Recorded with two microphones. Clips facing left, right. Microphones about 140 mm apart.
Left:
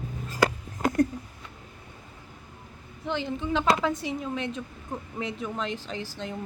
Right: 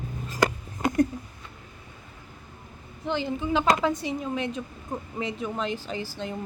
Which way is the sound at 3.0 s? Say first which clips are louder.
Right 2 dB; centre (ahead or behind).